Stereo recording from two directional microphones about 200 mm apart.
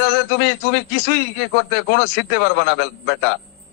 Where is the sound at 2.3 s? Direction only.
60° left (ahead or behind).